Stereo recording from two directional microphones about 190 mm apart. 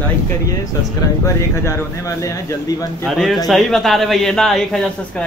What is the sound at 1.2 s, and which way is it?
Speech, 15° left (ahead or behind).